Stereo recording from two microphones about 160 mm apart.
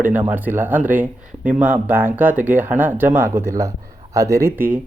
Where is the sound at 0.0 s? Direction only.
10° right (ahead or behind).